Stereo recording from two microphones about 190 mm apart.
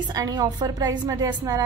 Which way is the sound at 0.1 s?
20° right (ahead or behind).